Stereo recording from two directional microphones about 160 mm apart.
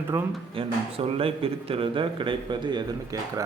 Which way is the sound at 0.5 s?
35° right (ahead or behind).